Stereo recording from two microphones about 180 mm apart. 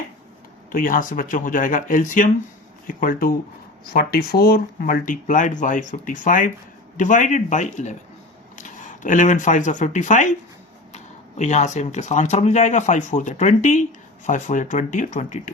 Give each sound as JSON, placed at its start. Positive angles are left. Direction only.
{"t": 0.7, "sound": "speech", "side_deg": 50}
{"t": 9.0, "sound": "speech", "side_deg": 45}